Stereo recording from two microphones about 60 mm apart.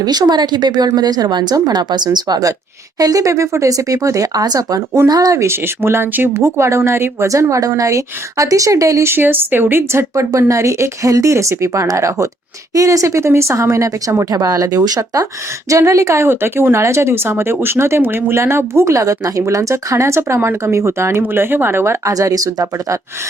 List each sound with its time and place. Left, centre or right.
0.9 s speech: right
2.3 s speech: right
5.5 s speech: right
7.8 s speech: right
9.0 s speech: right
10.3 s speech: right
14.3 s speech: right
15.7 s speech: right
22.0 s speech: right